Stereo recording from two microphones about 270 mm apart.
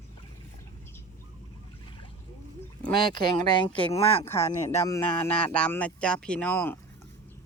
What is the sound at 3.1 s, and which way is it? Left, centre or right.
Speech, centre.